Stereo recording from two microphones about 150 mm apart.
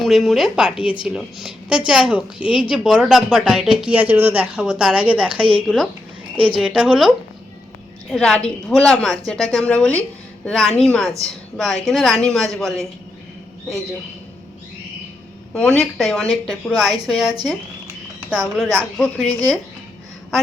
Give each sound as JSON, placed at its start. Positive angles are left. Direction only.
{"t": 0.0, "sound": "a woman's voice", "side_deg": 0}
{"t": 8.1, "sound": "a woman's voice", "side_deg": 5}
{"t": 15.5, "sound": "a woman's voice", "side_deg": 5}
{"t": 18.7, "sound": "speech", "side_deg": 10}